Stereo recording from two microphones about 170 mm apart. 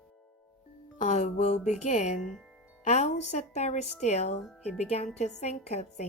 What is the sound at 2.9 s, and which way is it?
Speech, 40° left (ahead or behind).